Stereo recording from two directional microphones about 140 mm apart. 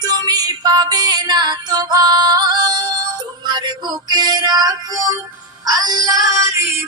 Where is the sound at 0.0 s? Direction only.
30° right (ahead or behind).